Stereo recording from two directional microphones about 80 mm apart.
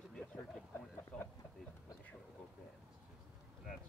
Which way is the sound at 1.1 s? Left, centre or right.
Centre.